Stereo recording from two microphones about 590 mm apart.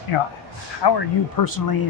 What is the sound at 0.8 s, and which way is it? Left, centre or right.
Speech, left.